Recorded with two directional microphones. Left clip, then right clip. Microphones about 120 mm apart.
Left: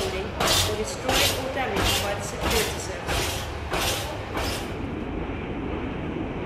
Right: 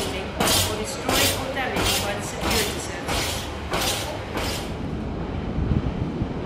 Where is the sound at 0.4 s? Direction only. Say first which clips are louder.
Right 1 dB; 85° right.